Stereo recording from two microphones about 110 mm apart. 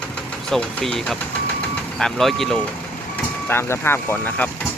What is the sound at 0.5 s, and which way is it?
Speech, 5° left (ahead or behind).